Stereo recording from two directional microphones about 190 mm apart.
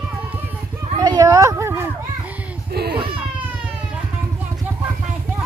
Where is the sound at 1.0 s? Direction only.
20° right (ahead or behind).